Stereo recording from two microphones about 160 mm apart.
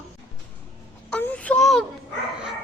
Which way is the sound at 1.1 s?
5° left (ahead or behind).